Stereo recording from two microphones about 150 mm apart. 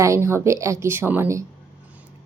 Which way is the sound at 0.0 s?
20° right (ahead or behind).